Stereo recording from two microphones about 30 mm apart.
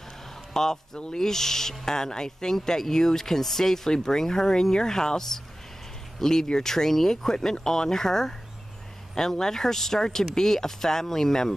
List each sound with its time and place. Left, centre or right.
0.5 s a sound: centre
1.1 s speech: centre
6.7 s speech: centre